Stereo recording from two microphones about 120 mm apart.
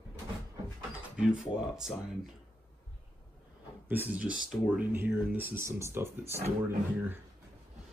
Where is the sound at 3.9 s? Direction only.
15° right (ahead or behind).